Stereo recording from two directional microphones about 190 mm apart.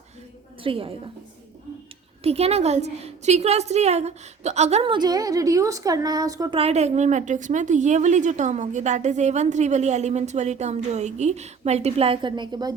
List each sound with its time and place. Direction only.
0.6 s a woman's voice: 30° right (ahead or behind)
2.2 s a woman's voice: 35° right (ahead or behind)
6.6 s a woman's voice: 35° right (ahead or behind)